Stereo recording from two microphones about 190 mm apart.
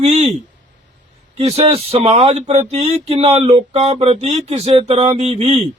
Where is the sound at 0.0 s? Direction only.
35° right (ahead or behind).